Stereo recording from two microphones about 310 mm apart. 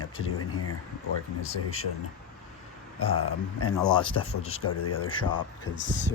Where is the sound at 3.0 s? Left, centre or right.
Centre.